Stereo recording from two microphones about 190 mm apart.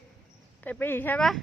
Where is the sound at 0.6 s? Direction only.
10° left (ahead or behind).